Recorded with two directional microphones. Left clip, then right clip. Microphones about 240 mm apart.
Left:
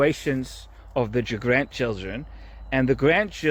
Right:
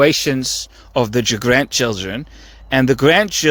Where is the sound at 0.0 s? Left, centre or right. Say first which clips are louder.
Right 8 dB; right.